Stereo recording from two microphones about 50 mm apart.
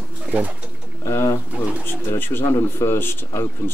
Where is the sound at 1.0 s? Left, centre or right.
Left.